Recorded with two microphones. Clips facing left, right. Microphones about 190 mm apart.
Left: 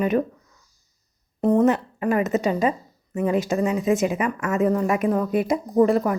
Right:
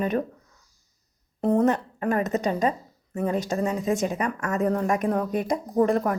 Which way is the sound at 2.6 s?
35° right (ahead or behind).